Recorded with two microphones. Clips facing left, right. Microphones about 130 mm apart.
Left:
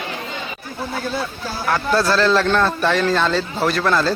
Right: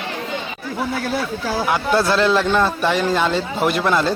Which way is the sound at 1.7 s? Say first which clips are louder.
Left 1 dB; 20° right (ahead or behind).